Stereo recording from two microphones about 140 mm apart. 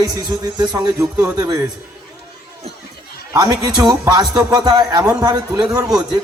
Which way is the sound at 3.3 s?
30° right (ahead or behind).